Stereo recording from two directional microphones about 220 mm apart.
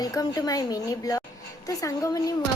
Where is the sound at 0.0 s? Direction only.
15° left (ahead or behind).